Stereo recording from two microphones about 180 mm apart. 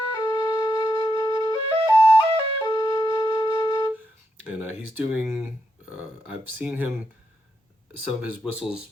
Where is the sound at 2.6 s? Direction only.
20° left (ahead or behind).